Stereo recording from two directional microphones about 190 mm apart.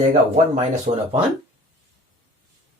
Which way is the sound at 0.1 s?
35° right (ahead or behind).